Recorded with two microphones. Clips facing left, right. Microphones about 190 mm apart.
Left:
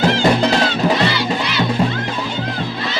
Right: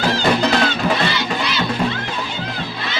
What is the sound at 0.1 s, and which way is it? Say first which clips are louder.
Music: left 2 dB; 25° left (ahead or behind).